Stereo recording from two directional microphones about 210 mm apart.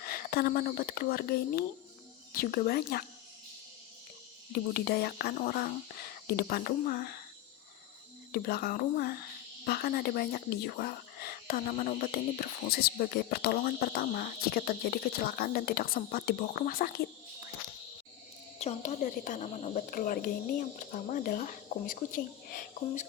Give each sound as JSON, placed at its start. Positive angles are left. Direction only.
{"t": 0.0, "sound": "speech", "side_deg": 45}
{"t": 4.7, "sound": "speech", "side_deg": 45}
{"t": 8.3, "sound": "speech", "side_deg": 45}
{"t": 18.6, "sound": "speech", "side_deg": 30}